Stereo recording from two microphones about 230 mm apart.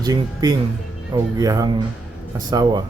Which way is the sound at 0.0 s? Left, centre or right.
Centre.